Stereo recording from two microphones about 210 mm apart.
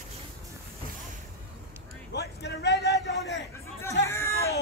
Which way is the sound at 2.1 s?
55° left (ahead or behind).